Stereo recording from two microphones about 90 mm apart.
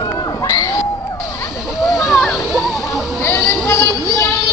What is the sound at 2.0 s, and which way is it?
Splash, centre (ahead or behind).